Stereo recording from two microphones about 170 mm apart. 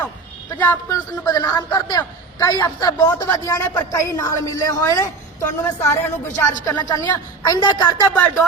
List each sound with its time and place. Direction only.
0.6 s speech: 10° left (ahead or behind)
1.3 s a woman's voice: 20° left (ahead or behind)
6.3 s speech: 50° left (ahead or behind)
6.7 s a woman's voice: 20° left (ahead or behind)